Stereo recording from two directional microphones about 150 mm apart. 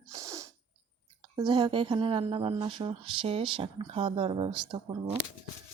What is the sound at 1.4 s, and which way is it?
Speech, 30° right (ahead or behind).